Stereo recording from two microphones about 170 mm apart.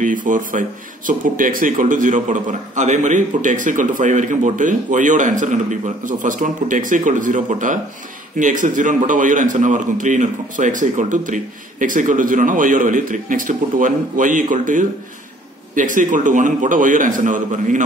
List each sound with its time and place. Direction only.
0.0 s speech: 50° right (ahead or behind)